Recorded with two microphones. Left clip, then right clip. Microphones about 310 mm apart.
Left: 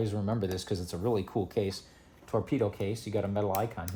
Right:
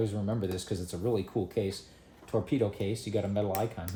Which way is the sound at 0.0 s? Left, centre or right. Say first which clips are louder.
Even; centre.